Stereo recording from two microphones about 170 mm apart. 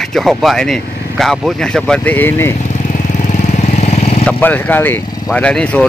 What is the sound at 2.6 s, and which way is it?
Vehicle, 45° left (ahead or behind).